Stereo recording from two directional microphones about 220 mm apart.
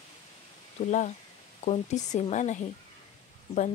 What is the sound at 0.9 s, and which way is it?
Speech, 35° left (ahead or behind).